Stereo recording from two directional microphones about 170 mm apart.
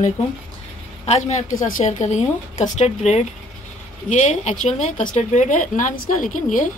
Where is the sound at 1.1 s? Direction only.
40° left (ahead or behind).